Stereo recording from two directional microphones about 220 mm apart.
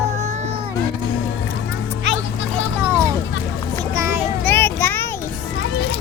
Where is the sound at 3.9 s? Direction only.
10° right (ahead or behind).